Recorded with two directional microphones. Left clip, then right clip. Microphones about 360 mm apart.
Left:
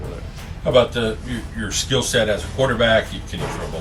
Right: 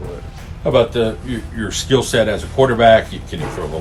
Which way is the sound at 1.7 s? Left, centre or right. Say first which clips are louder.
Right 4 dB; centre.